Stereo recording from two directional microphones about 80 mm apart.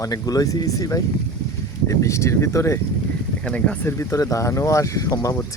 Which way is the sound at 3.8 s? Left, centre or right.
Left.